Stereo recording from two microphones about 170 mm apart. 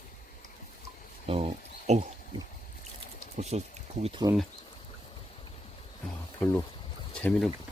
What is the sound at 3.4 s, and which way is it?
Speech, 40° right (ahead or behind).